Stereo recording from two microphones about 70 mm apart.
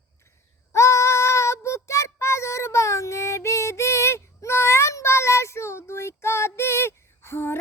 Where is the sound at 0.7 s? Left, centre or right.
Left.